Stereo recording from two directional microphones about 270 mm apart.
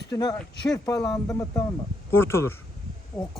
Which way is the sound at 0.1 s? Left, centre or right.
Centre.